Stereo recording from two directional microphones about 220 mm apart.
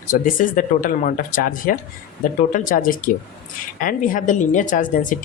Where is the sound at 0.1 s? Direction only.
35° left (ahead or behind).